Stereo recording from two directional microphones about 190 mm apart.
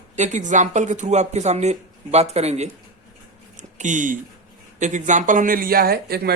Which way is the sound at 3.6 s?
40° right (ahead or behind).